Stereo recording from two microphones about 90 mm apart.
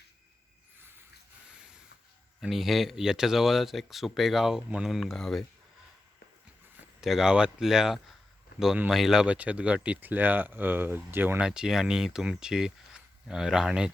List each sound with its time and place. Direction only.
0.8 s a sound: 25° right (ahead or behind)
1.5 s rub: 10° right (ahead or behind)
2.4 s speech: centre (ahead or behind)
7.0 s speech: 5° right (ahead or behind); by 11.3 s 25° right (ahead or behind)
11.3 s speech: 10° right (ahead or behind)